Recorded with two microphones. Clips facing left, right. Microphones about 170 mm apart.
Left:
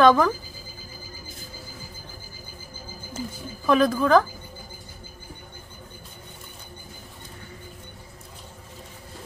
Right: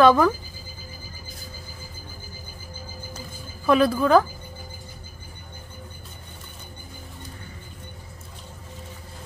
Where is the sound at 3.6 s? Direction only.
10° right (ahead or behind).